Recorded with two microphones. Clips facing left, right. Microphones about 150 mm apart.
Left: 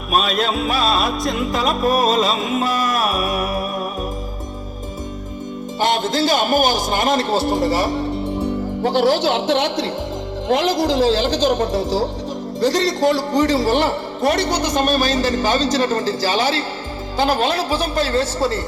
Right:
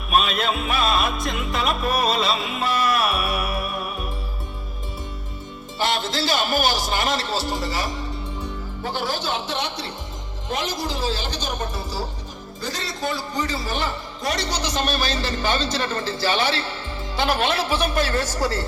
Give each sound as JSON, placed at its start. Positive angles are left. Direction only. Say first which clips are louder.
{"t": 0.1, "sound": "music", "louder": "left 3 dB", "side_deg": 40}
{"t": 5.8, "sound": "a man's voice", "louder": "left 6 dB", "side_deg": 50}
{"t": 17.2, "sound": "music", "louder": "left 4 dB", "side_deg": 35}